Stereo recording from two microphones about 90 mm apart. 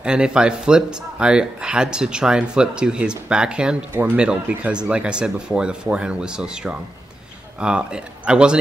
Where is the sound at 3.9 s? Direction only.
20° right (ahead or behind).